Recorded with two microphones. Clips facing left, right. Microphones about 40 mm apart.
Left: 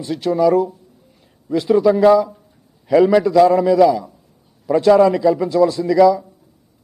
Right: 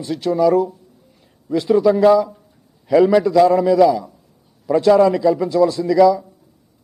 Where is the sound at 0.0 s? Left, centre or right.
Centre.